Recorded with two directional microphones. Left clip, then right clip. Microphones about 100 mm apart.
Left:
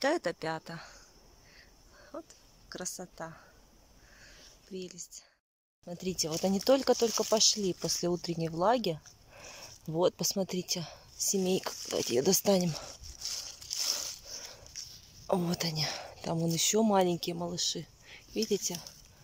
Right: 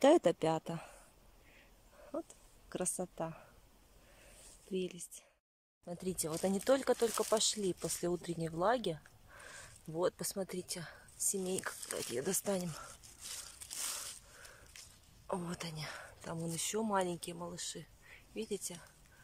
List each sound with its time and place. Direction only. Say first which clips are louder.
0.0 s speech: right 3 dB; 35° right (ahead or behind)
2.1 s speech: right 2 dB; 30° right (ahead or behind)
4.7 s speech: right 2 dB; 30° right (ahead or behind)
5.9 s speech: left 5 dB; centre (ahead or behind); by 11.0 s 20° left (ahead or behind)
11.3 s speech: left 9 dB; 30° left (ahead or behind)
15.2 s speech: left 10 dB; 40° left (ahead or behind)